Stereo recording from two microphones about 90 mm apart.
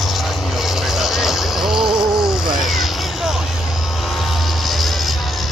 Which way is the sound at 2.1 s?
5° right (ahead or behind).